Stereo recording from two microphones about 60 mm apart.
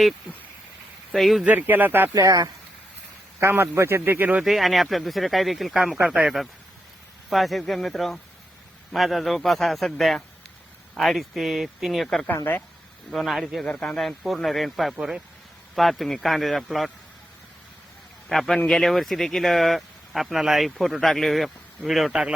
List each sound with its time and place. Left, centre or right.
1.1 s speech: centre
1.5 s speech: right
2.1 s speech: right
3.4 s speech: right
4.4 s speech: centre
6.1 s speech: centre
7.3 s speech: centre
13.7 s speech: centre
18.3 s speech: centre